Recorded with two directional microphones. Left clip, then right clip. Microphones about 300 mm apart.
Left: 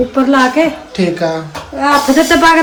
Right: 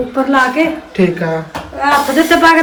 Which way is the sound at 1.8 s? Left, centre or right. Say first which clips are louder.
Left 1 dB; left.